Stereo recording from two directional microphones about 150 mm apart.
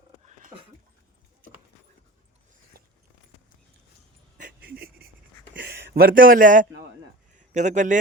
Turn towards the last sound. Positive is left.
turn(degrees=-55)  # may be behind; listen again after turning